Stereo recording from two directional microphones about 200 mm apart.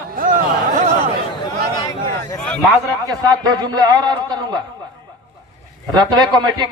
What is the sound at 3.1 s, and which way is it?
A man's voice, 20° right (ahead or behind).